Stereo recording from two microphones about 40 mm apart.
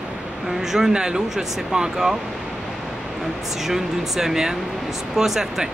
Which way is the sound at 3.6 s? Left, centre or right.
Centre.